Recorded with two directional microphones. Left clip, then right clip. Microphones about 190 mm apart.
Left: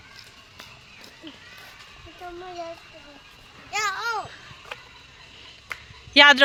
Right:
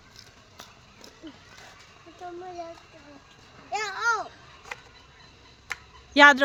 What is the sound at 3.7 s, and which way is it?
Babbling, 50° right (ahead or behind).